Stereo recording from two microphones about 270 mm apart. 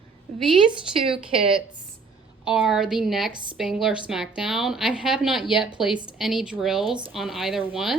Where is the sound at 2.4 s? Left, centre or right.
Centre.